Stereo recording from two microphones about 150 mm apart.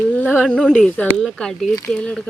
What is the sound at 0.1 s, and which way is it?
Speech, 10° left (ahead or behind).